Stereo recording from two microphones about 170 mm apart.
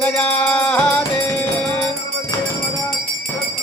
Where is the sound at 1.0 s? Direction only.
20° left (ahead or behind).